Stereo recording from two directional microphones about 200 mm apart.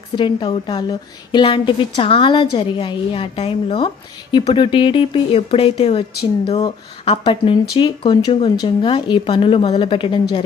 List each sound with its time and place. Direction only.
0.2 s a woman's voice: 25° left (ahead or behind)